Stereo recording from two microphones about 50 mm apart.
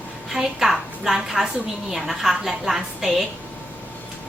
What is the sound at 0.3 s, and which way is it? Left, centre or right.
A woman's voice, centre.